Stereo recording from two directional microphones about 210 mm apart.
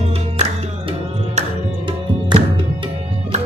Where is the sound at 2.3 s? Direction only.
20° right (ahead or behind).